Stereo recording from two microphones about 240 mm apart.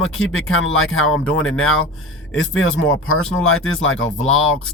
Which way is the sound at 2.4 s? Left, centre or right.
Left.